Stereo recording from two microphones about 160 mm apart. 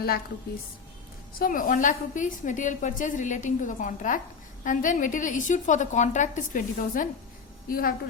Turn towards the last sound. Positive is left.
turn(degrees=65)  # may be behind; listen again after turning